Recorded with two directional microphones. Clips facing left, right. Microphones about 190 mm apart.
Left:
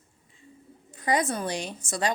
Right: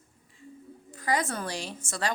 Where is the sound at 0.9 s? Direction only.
20° left (ahead or behind).